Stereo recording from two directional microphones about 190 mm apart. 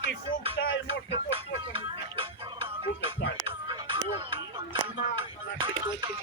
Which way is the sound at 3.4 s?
25° right (ahead or behind).